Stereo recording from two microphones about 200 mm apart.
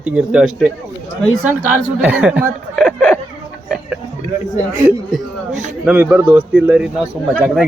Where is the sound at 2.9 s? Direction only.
5° left (ahead or behind).